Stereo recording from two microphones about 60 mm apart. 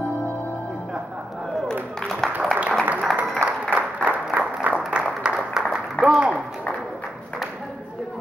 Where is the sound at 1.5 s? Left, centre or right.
Centre.